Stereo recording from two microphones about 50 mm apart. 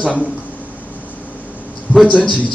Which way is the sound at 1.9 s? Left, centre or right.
Left.